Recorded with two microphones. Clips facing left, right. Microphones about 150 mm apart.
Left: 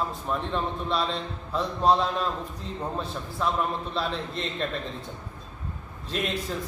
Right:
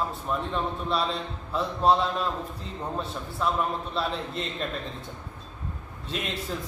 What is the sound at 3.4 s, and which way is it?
A man's voice, centre (ahead or behind).